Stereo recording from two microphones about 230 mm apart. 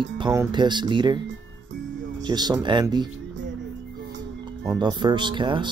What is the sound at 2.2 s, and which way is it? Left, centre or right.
Speech, centre.